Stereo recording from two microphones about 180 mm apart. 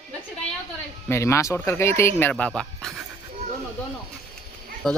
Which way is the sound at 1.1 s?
15° left (ahead or behind).